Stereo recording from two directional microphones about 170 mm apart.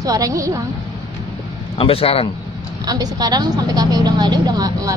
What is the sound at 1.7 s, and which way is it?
Speech, 35° left (ahead or behind).